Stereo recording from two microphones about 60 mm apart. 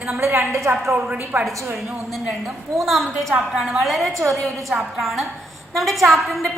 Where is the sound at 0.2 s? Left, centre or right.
Right.